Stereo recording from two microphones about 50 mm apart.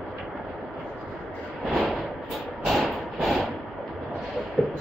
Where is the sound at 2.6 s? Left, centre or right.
Centre.